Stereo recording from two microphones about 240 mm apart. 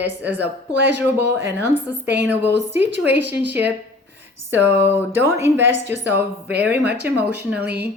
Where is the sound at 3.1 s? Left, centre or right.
Right.